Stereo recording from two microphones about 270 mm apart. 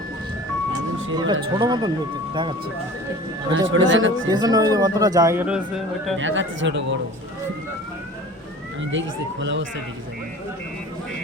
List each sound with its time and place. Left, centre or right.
1.1 s a man's voice: centre
3.5 s speech: right
4.3 s a man's voice: centre
6.1 s speech: right
8.9 s speech: right